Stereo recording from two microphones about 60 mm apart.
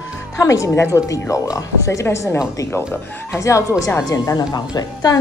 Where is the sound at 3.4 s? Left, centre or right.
Left.